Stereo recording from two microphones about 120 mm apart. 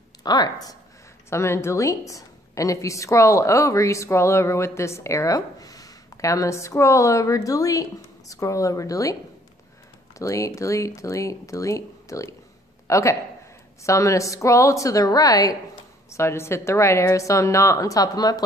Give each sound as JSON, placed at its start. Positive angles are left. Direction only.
{"t": 0.2, "sound": "a woman's voice", "side_deg": 35}
{"t": 1.3, "sound": "a woman's voice", "side_deg": 20}
{"t": 10.1, "sound": "a woman's voice", "side_deg": 25}